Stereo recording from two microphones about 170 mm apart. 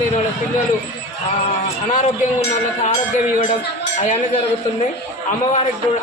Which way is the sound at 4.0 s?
40° left (ahead or behind).